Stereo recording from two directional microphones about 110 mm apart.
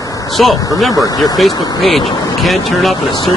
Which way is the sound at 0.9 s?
35° left (ahead or behind).